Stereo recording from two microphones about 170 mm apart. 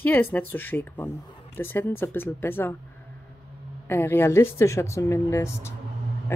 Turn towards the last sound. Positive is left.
turn(degrees=15)  # may be behind; listen again after turning